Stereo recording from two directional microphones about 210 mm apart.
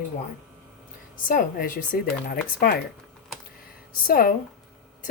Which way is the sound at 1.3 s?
40° left (ahead or behind).